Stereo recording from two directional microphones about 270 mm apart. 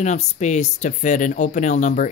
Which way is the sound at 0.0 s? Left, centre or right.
Left.